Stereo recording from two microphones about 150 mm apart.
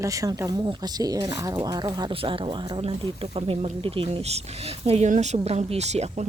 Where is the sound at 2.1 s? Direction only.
35° right (ahead or behind).